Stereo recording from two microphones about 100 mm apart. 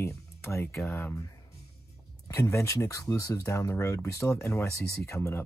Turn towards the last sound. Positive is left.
turn(degrees=25)  # may be behind; listen again after turning